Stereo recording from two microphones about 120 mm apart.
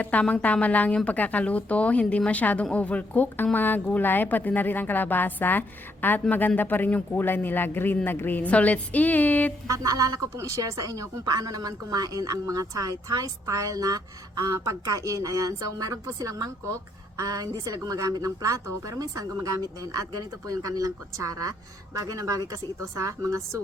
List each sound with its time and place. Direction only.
0.0 s a woman's voice: 10° left (ahead or behind)
9.6 s speech: 30° right (ahead or behind)